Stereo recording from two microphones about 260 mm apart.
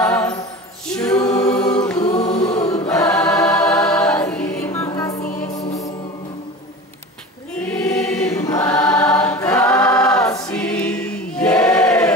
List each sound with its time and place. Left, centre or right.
0.0 s music: centre
0.9 s choir: centre
2.1 s chant: left
2.4 s chant: centre
2.7 s choir: centre
5.4 s music: centre
7.5 s choir: centre